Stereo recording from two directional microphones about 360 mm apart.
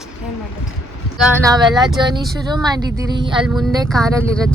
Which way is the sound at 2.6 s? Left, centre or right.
Centre.